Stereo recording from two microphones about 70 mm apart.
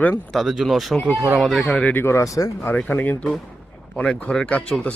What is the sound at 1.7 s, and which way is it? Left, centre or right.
Speech, left.